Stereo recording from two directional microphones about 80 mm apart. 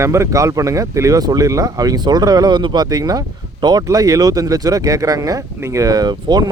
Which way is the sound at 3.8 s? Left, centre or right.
Right.